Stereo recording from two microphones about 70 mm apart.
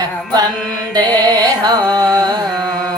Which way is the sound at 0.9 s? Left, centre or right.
Right.